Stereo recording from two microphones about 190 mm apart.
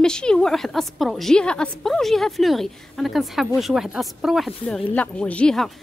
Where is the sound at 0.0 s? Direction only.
5° left (ahead or behind).